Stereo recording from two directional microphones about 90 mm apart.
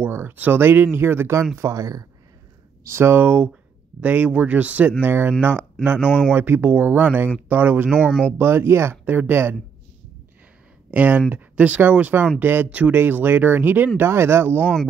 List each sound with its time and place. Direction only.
0.0 s speech: 25° right (ahead or behind); by 2.0 s 40° right (ahead or behind)
2.8 s speech: 25° right (ahead or behind)
5.9 s speech: 15° left (ahead or behind)
6.3 s speech: 20° right (ahead or behind)
10.9 s speech: 20° right (ahead or behind)
14.6 s speech: 15° left (ahead or behind)